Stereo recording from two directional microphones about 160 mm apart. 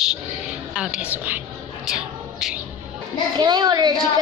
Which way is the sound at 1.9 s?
5° right (ahead or behind).